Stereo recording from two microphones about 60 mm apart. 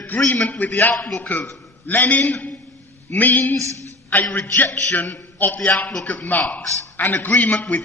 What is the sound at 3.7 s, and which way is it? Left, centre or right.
Speech, right.